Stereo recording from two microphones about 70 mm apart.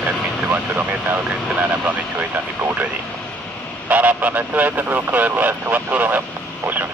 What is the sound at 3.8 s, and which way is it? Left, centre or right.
Speech, right.